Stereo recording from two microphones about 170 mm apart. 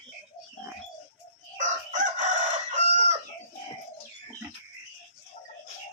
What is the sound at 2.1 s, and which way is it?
Chicken, 45° right (ahead or behind).